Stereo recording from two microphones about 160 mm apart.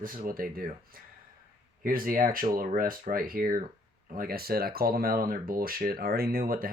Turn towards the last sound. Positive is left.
turn(degrees=-65)  # may be behind; listen again after turning